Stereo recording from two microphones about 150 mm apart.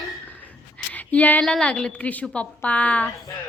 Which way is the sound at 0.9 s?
10° left (ahead or behind).